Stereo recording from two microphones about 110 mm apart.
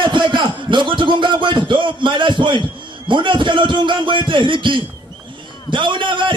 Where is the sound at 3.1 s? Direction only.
45° right (ahead or behind).